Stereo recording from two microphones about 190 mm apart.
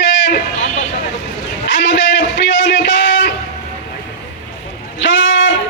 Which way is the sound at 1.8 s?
70° left (ahead or behind).